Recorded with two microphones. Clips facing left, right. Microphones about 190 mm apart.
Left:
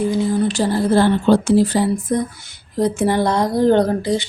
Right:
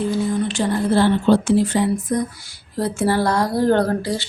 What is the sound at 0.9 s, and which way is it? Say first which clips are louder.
A woman's voice: left 1 dB; 45° left (ahead or behind).